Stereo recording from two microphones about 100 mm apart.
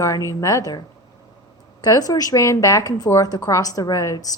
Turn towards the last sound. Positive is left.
turn(degrees=35)  # may be behind; listen again after turning